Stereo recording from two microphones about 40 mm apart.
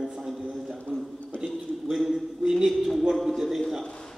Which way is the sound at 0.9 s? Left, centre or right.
Right.